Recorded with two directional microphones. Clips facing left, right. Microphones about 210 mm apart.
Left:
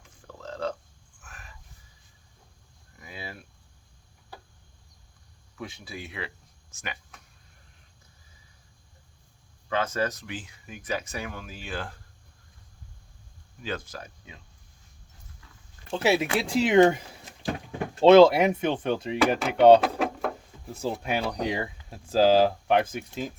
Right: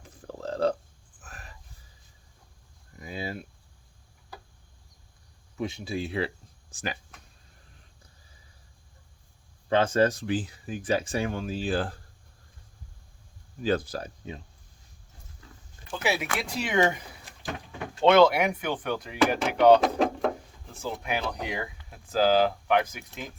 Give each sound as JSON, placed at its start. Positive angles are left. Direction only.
{"t": 0.0, "sound": "burping", "side_deg": -35}
{"t": 1.2, "sound": "a sound", "side_deg": -35}
{"t": 3.0, "sound": "a sound", "side_deg": -25}
{"t": 5.5, "sound": "speech", "side_deg": -25}
{"t": 9.6, "sound": "speech", "side_deg": -30}
{"t": 13.6, "sound": "speech", "side_deg": -35}
{"t": 15.9, "sound": "speech", "side_deg": 25}
{"t": 18.0, "sound": "speech", "side_deg": 25}
{"t": 19.1, "sound": "speech", "side_deg": 0}
{"t": 19.8, "sound": "drawer open or close", "side_deg": 5}
{"t": 20.8, "sound": "speech", "side_deg": 30}